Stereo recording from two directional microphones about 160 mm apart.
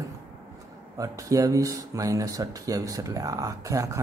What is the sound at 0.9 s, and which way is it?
A man's voice, 20° right (ahead or behind).